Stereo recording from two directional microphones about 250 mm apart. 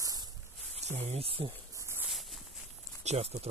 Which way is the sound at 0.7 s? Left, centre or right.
Right.